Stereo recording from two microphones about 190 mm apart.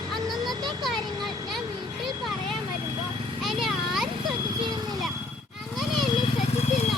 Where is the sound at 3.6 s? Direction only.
Centre (ahead or behind).